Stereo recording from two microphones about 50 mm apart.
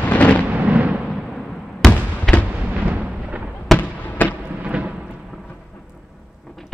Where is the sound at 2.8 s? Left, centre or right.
Right.